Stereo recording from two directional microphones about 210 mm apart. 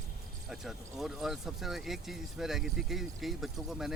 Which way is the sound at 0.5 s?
Centre (ahead or behind).